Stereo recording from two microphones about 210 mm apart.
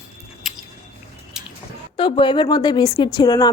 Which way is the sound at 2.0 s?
25° left (ahead or behind).